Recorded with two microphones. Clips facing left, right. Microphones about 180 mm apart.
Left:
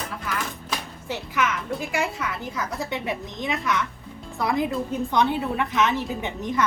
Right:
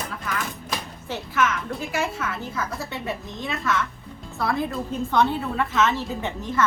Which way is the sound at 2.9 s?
15° left (ahead or behind).